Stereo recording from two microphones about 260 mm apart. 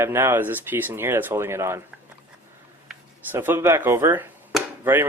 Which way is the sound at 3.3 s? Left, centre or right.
Centre.